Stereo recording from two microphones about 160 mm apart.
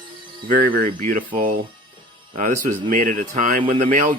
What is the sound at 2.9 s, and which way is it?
Speech, 55° right (ahead or behind).